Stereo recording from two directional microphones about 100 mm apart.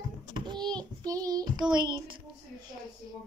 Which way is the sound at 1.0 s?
35° right (ahead or behind).